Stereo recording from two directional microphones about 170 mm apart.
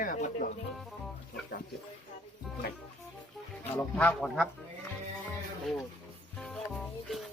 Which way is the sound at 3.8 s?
10° left (ahead or behind).